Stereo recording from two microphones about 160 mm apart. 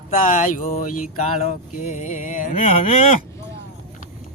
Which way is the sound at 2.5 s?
35° left (ahead or behind).